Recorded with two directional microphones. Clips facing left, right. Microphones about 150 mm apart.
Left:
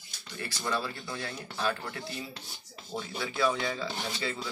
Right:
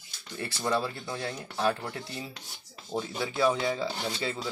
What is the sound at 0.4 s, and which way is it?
Speech, 25° right (ahead or behind).